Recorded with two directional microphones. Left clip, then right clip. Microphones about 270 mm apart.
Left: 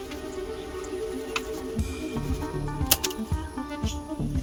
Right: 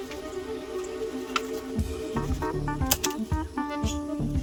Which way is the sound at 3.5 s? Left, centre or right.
Centre.